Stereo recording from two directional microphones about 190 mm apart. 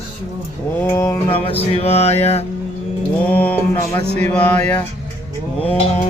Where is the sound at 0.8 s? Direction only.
15° left (ahead or behind).